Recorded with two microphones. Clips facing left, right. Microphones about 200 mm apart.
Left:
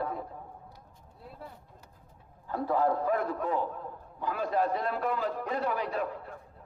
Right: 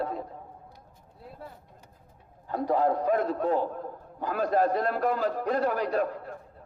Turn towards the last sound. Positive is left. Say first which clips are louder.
# right 5 dB
turn(degrees=-45)  # may be behind; listen again after turning